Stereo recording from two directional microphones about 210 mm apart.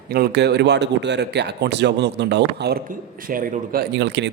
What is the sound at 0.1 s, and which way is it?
A man's voice, 50° right (ahead or behind).